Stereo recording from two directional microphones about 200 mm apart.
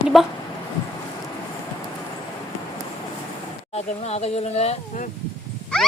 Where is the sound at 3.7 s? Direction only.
30° left (ahead or behind).